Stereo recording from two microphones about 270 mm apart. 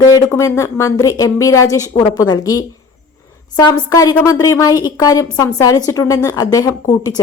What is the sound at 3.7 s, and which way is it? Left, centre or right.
A woman's voice, centre.